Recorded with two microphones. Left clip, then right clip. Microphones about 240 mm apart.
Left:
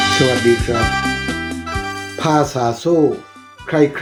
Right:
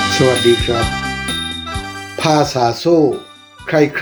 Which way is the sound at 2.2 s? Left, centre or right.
Centre.